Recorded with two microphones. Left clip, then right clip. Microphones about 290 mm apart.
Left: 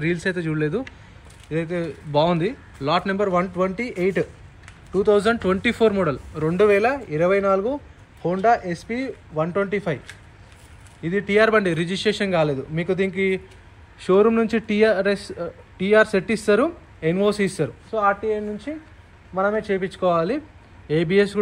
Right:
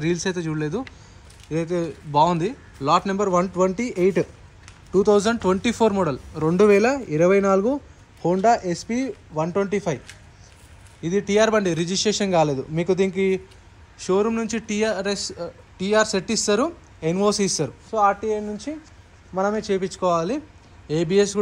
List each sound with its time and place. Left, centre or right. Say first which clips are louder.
0.0 s a man's voice: left 1 dB; centre
11.0 s a man's voice: left 1 dB; centre